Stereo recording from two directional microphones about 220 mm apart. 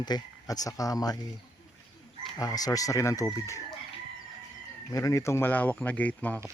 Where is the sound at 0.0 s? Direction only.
20° left (ahead or behind).